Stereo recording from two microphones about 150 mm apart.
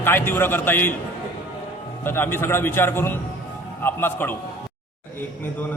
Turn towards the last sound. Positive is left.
turn(degrees=15)  # may be behind; listen again after turning